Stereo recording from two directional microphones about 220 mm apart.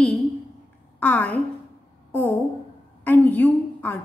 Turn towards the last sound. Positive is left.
turn(degrees=5)  # may be behind; listen again after turning